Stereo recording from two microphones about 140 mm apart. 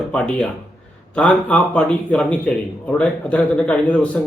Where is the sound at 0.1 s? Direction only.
10° left (ahead or behind).